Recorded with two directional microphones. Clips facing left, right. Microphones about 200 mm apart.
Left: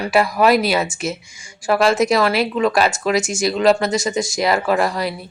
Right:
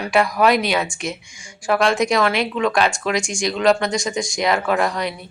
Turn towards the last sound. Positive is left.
turn(degrees=5)  # may be behind; listen again after turning